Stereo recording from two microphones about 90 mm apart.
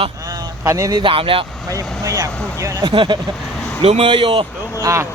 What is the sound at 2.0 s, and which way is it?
Speech, 35° right (ahead or behind).